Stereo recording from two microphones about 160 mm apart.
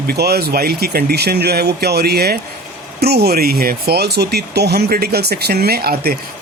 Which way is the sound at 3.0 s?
90° right.